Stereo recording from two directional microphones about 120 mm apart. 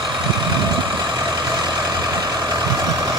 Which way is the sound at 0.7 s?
35° right (ahead or behind).